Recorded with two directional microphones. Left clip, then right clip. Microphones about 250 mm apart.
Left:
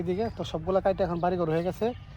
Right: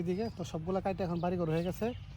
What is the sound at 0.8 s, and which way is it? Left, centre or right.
Speech, left.